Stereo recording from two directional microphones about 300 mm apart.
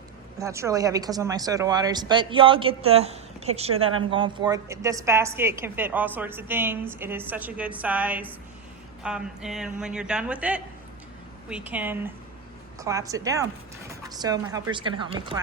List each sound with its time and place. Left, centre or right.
0.3 s a woman's voice: centre